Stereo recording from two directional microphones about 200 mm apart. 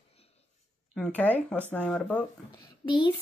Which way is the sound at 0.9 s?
5° left (ahead or behind).